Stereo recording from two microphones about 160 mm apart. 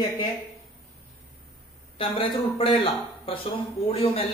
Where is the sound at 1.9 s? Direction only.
35° left (ahead or behind).